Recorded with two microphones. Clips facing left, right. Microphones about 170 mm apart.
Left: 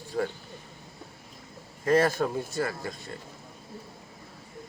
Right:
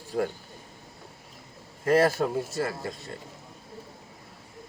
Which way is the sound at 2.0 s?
5° right (ahead or behind).